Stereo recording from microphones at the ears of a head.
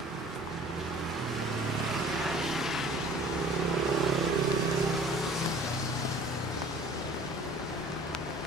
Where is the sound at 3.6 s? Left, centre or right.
Right.